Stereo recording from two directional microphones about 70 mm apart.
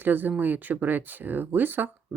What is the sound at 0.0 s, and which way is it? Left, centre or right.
Speech, right.